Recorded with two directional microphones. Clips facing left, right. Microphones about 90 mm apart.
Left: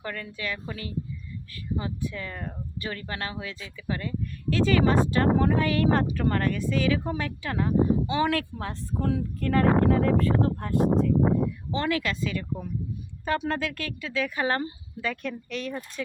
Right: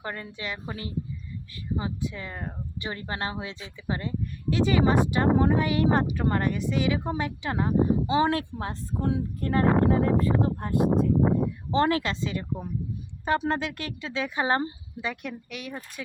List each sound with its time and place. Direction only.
0.0 s speech: 25° right (ahead or behind)
11.7 s speech: 35° right (ahead or behind); by 15.8 s 15° right (ahead or behind)